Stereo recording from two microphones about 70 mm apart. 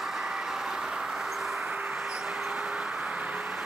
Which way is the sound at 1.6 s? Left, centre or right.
Centre.